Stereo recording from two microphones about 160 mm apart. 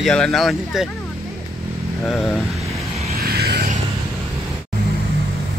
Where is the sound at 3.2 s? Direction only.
75° right (ahead or behind).